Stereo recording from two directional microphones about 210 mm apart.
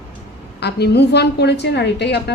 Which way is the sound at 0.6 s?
50° left (ahead or behind).